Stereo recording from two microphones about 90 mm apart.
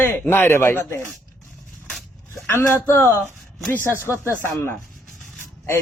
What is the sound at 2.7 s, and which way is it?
Speech, 30° left (ahead or behind).